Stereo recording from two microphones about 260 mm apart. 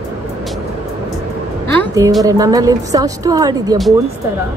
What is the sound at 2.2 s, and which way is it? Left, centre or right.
A woman's voice, centre.